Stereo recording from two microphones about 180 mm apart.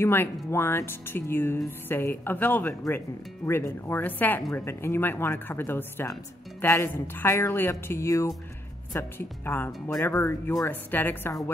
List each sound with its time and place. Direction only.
0.0 s speech: 10° left (ahead or behind)